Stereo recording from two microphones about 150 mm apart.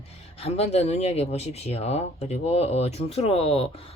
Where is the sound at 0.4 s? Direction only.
45° left (ahead or behind).